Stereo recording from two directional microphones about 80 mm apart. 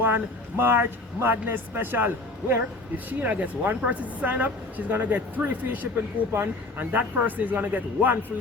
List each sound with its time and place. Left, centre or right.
0.6 s a woman's voice: right